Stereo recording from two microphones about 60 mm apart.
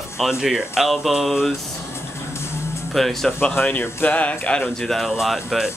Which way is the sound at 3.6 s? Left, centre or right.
Left.